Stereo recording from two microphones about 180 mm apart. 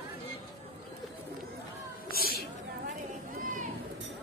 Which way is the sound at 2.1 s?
55° left (ahead or behind).